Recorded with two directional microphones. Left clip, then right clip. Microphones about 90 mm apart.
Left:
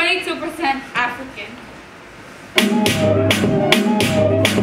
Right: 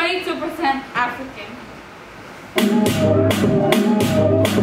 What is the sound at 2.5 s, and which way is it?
Music, 20° left (ahead or behind).